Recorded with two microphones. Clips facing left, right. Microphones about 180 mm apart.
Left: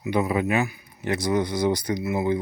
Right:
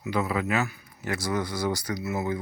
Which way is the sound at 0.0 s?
20° left (ahead or behind).